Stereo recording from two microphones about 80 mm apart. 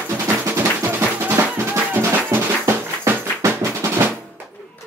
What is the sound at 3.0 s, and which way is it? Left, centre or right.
Music, right.